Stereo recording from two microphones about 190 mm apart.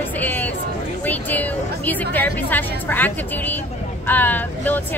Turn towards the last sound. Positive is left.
turn(degrees=10)  # may be behind; listen again after turning